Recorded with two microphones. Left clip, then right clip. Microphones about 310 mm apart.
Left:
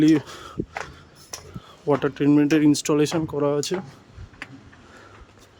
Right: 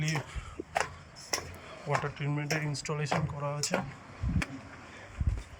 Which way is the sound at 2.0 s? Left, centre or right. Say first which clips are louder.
Left 17 dB; left.